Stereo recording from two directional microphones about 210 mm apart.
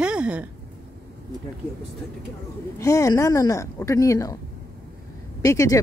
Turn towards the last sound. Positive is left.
turn(degrees=15)  # may be behind; listen again after turning